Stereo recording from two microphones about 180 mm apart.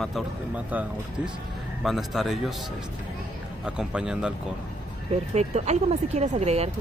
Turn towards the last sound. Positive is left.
turn(degrees=-35)  # may be behind; listen again after turning